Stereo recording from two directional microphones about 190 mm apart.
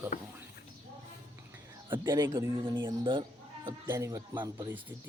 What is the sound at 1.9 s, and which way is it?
Speech, 20° right (ahead or behind).